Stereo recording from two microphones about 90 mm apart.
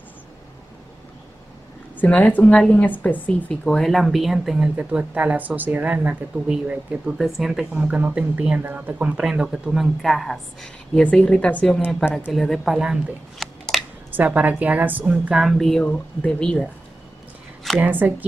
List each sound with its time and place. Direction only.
2.0 s speech: 15° left (ahead or behind); by 4.6 s 5° right (ahead or behind)
4.7 s speech: 15° right (ahead or behind)
7.2 s speech: centre (ahead or behind)
9.2 s speech: 5° right (ahead or behind); by 11.8 s 10° left (ahead or behind)
12.0 s speech: 10° right (ahead or behind)
12.3 s speech: centre (ahead or behind)
14.1 s speech: 20° right (ahead or behind)
15.3 s speech: centre (ahead or behind)
17.7 s speech: 20° right (ahead or behind)